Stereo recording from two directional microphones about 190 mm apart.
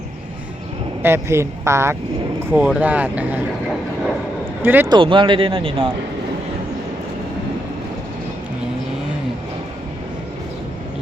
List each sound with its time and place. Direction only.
1.0 s speech: 15° right (ahead or behind)
4.6 s speech: 10° right (ahead or behind)
4.9 s speech: 25° right (ahead or behind)